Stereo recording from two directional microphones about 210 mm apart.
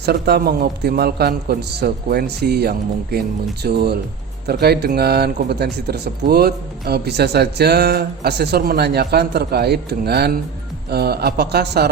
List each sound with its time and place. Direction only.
0.0 s a man's voice: 50° right (ahead or behind)